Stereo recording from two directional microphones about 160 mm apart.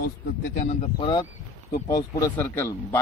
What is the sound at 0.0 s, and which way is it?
Speech, 55° left (ahead or behind).